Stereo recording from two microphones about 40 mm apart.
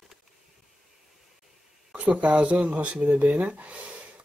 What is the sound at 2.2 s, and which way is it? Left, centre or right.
Speech, right.